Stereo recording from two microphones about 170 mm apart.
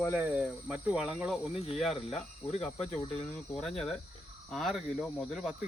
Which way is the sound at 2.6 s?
5° left (ahead or behind).